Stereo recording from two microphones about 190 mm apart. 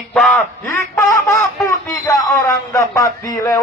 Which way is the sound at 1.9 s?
20° left (ahead or behind).